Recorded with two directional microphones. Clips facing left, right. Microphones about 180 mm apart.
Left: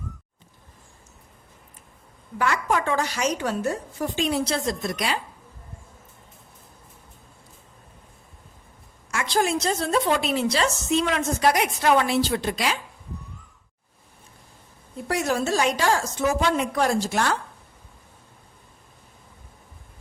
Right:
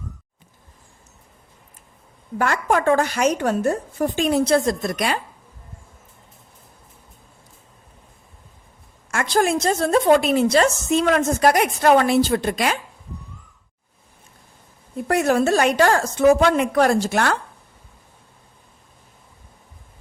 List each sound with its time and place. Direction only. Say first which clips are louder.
2.4 s a woman's voice: right 4 dB; 50° right (ahead or behind)
9.0 s a woman's voice: right 4 dB; 50° right (ahead or behind)
15.0 s a woman's voice: right 6 dB; 55° right (ahead or behind)